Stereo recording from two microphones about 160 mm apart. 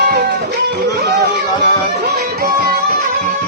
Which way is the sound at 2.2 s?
70° right (ahead or behind).